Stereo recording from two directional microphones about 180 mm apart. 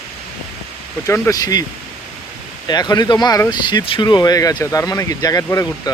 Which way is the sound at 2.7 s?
20° left (ahead or behind).